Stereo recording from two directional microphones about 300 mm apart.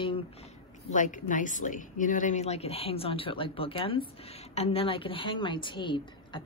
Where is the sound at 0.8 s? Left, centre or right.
Left.